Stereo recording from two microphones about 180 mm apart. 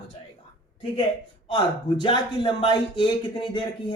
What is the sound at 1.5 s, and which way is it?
Speech, 25° left (ahead or behind).